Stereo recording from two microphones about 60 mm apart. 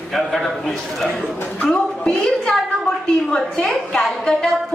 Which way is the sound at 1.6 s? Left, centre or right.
Centre.